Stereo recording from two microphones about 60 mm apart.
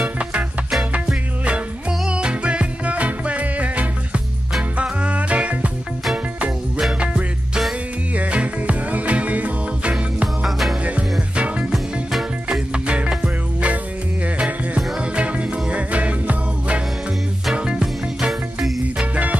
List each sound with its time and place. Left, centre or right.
0.2 s music: centre
7.0 s music: centre
10.2 s music: centre
10.8 s music: right
11.7 s music: centre